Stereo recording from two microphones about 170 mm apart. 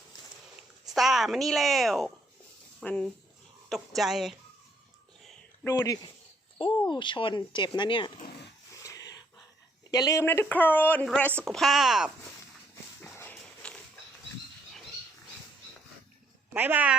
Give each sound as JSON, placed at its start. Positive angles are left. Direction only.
{"t": 0.9, "sound": "speech", "side_deg": 0}
{"t": 5.6, "sound": "speech", "side_deg": 20}
{"t": 8.8, "sound": "a sound", "side_deg": 20}
{"t": 9.9, "sound": "speech", "side_deg": 20}
{"t": 13.0, "sound": "walk", "side_deg": 10}
{"t": 16.6, "sound": "speech", "side_deg": -10}